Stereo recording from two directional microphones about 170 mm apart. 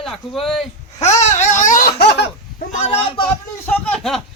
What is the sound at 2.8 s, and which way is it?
Speech, 35° left (ahead or behind).